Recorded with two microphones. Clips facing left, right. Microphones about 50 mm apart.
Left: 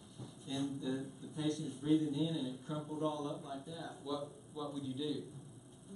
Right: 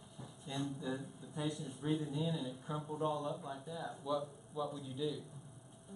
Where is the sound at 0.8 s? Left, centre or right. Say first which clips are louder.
Left 2 dB; centre.